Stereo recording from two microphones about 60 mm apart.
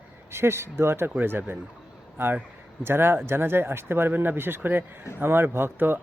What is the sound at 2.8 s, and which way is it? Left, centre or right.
Speech, right.